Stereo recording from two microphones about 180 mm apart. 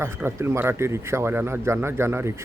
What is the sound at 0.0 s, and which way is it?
Speech, 15° right (ahead or behind).